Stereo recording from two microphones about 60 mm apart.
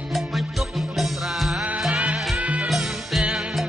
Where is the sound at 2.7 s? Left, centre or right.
Centre.